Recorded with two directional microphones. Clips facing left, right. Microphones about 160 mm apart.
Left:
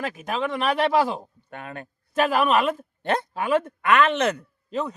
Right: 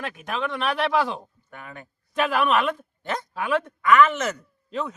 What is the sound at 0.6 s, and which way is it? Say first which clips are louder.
Speech: left 2 dB; 40° left (ahead or behind).